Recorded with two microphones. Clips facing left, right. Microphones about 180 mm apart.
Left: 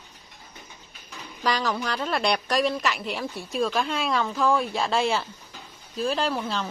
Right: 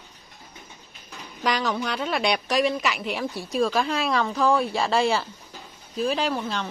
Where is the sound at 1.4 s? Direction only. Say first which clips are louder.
Right 1 dB; centre (ahead or behind).